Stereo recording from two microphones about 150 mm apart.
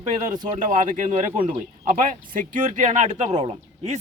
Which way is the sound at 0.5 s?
55° right (ahead or behind).